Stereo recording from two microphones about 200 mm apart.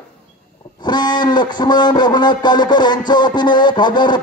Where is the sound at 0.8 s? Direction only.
20° left (ahead or behind).